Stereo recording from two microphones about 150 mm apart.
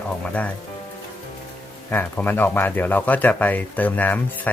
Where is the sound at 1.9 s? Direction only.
10° left (ahead or behind).